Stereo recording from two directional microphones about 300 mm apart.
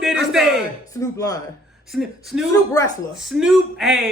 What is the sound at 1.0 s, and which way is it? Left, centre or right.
Speech, centre.